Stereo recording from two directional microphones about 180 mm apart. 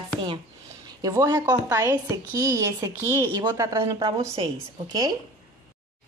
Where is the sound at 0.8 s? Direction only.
20° right (ahead or behind).